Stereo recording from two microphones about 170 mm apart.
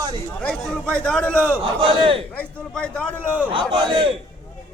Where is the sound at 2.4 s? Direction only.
5° left (ahead or behind).